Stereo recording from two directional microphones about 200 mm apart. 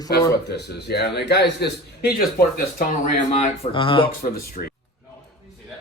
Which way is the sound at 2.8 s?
40° left (ahead or behind).